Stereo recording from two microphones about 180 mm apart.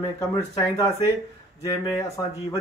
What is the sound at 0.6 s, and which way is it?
Speech, 20° left (ahead or behind).